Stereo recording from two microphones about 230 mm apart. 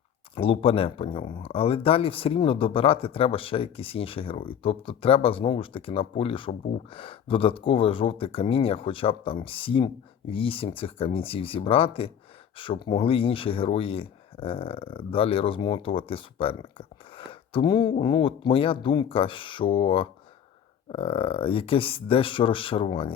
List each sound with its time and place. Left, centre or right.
0.3 s speech: left